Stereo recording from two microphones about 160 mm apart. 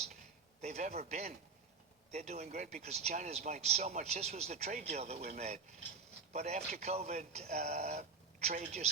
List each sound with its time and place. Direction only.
0.6 s speech: 45° right (ahead or behind)
6.3 s speech: 45° right (ahead or behind)